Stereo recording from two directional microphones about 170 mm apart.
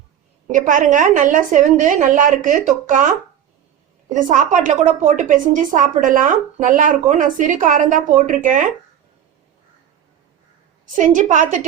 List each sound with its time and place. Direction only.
0.4 s a woman's voice: 50° right (ahead or behind)
10.9 s a woman's voice: 50° right (ahead or behind)